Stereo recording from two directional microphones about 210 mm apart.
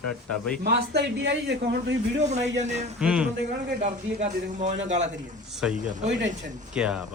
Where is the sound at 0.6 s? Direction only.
50° right (ahead or behind).